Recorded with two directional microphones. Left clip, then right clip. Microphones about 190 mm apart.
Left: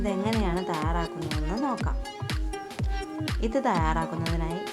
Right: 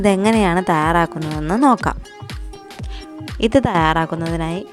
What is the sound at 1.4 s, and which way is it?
Speech, 55° right (ahead or behind).